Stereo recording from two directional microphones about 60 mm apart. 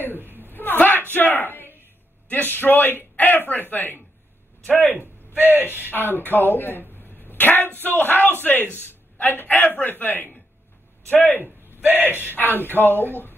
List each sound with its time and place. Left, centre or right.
0.5 s a sound: left
1.1 s a man's voice: left
5.3 s speech: right
5.9 s a man's voice: left
11.8 s speech: right
12.4 s a man's voice: left